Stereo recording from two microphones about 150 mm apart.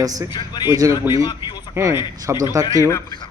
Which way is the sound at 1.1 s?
30° left (ahead or behind).